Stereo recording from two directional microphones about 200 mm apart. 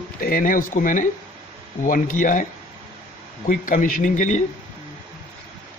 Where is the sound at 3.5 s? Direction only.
45° left (ahead or behind).